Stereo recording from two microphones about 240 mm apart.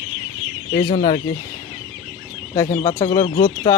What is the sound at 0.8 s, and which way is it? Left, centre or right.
Speech, centre.